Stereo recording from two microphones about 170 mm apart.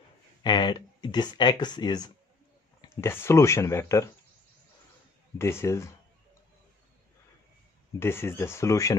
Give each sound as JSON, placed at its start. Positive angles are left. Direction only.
{"t": 0.4, "sound": "speech", "side_deg": 25}
{"t": 5.4, "sound": "speech", "side_deg": 15}
{"t": 8.0, "sound": "speech", "side_deg": 15}